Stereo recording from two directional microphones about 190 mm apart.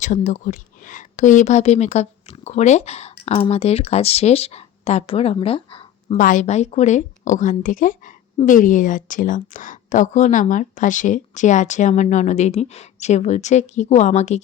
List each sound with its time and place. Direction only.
0.0 s a woman's voice: 40° left (ahead or behind)
6.1 s a woman's voice: 45° left (ahead or behind)